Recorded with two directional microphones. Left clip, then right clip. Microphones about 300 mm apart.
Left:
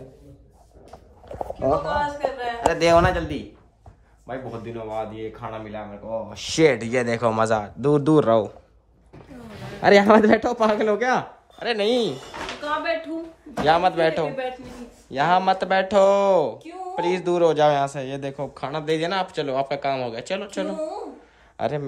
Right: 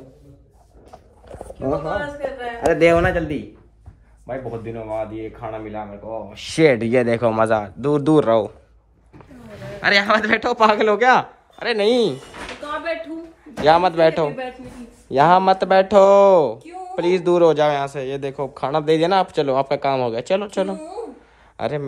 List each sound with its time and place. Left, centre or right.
1.4 s a man's voice: right
4.3 s speech: centre
9.8 s speech: centre
13.7 s speech: centre